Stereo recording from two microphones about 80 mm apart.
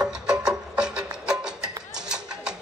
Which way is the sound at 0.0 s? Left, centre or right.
Centre.